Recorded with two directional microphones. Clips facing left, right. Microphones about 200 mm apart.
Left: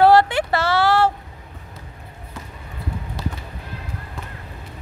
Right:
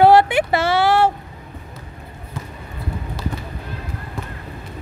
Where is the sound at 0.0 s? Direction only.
20° right (ahead or behind).